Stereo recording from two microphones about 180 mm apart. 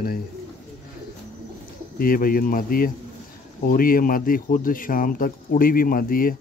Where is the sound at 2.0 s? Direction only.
55° left (ahead or behind).